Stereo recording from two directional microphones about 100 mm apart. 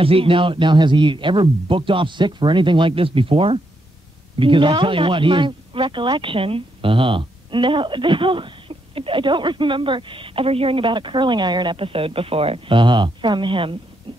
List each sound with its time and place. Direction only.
0.0 s speech: 65° right (ahead or behind)
4.4 s speech: 55° right (ahead or behind)
14.1 s a sound: 70° right (ahead or behind)